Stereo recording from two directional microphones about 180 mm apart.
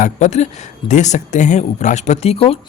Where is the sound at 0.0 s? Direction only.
40° left (ahead or behind).